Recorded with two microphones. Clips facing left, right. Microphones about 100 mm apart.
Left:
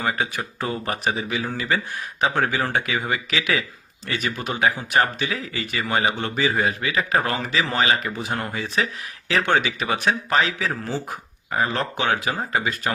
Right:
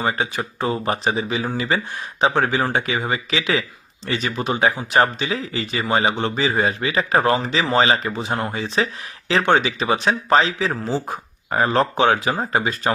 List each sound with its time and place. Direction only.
0.0 s speech: 25° right (ahead or behind)
11.5 s speech: 40° right (ahead or behind)